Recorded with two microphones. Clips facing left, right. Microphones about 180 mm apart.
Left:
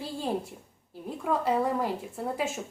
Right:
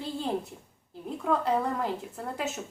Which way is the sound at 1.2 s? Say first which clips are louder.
Left 1 dB; 5° left (ahead or behind).